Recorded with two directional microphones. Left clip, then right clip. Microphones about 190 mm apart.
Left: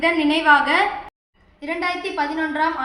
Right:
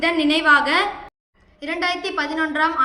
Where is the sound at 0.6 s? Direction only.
Centre (ahead or behind).